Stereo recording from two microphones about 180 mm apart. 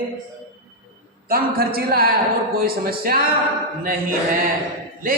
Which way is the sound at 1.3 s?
55° right (ahead or behind).